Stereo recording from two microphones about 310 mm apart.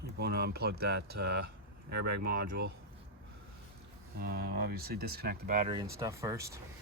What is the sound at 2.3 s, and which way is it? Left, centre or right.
Speech, right.